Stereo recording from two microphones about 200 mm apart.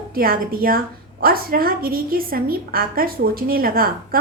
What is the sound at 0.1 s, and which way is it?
A woman's voice, 45° right (ahead or behind).